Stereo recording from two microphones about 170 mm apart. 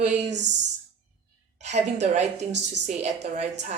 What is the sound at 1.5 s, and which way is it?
Speech, 40° right (ahead or behind).